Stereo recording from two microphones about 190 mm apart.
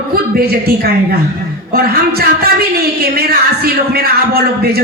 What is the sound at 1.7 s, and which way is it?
A woman's voice, 55° right (ahead or behind).